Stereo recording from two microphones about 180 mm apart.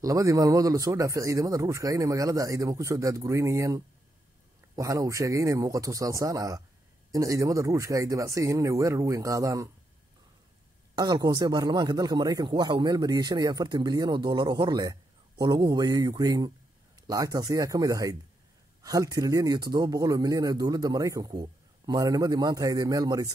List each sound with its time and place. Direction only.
0.0 s a man's voice: 20° right (ahead or behind)
11.0 s speech: 20° right (ahead or behind)